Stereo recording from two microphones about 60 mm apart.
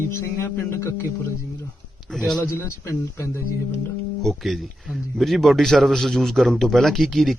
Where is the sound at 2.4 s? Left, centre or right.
Left.